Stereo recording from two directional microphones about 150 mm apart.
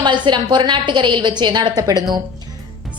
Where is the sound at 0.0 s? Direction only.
30° right (ahead or behind).